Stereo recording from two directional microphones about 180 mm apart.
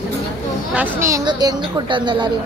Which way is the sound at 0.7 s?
15° right (ahead or behind).